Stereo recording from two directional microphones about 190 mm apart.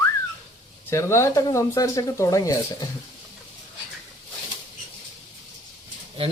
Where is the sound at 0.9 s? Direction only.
15° left (ahead or behind).